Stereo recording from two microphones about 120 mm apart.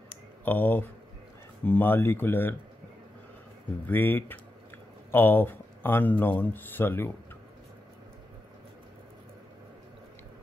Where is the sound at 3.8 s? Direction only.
15° left (ahead or behind).